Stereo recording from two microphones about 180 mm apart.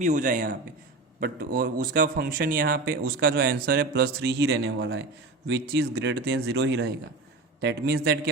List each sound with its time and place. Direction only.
0.0 s a man's voice: 45° right (ahead or behind); by 6.9 s 85° right
7.6 s speech: 65° right (ahead or behind)